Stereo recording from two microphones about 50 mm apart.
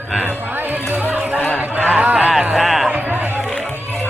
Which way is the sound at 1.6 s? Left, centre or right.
Right.